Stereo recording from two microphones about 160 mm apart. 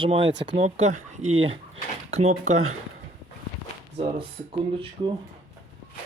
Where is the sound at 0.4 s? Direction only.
40° right (ahead or behind).